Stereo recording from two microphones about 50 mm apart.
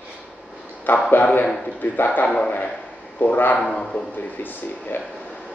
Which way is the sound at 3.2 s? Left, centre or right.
Left.